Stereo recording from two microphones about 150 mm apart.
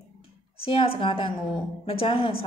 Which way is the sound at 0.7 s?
35° left (ahead or behind).